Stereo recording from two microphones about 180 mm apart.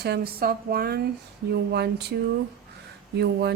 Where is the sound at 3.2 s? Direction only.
65° right (ahead or behind).